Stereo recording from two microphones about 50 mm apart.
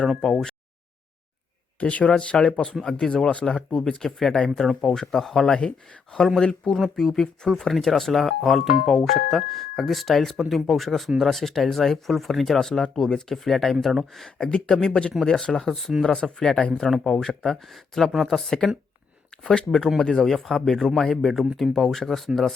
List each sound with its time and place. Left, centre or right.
0.2 s speech: centre
1.8 s speech: left; by 13.7 s centre
14.3 s speech: centre